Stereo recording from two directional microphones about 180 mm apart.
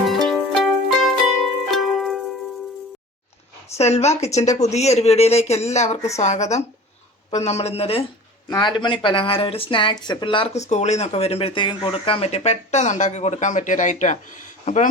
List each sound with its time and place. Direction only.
0.3 s music: centre (ahead or behind)
3.8 s speech: 35° left (ahead or behind)